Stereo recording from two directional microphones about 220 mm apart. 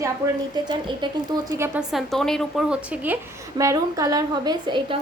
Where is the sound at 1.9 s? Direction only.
Centre (ahead or behind).